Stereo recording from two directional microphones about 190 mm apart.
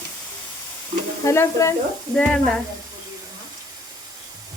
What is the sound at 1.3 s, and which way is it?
Speech, 15° left (ahead or behind).